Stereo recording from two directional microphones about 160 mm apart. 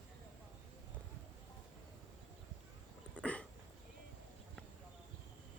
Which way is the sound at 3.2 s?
5° left (ahead or behind).